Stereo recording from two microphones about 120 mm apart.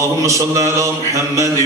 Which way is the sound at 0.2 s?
25° right (ahead or behind).